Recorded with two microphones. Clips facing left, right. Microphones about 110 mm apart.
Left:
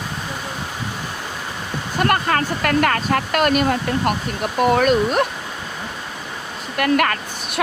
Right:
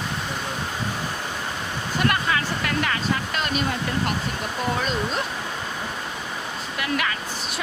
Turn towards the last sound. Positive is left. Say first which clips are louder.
# left 4 dB
turn(degrees=55)  # may be behind; listen again after turning